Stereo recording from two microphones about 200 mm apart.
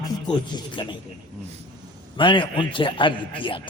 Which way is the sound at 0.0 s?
20° left (ahead or behind).